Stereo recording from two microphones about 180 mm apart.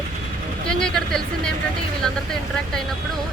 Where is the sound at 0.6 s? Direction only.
5° left (ahead or behind).